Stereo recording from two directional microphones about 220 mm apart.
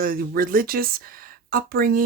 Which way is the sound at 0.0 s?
40° right (ahead or behind).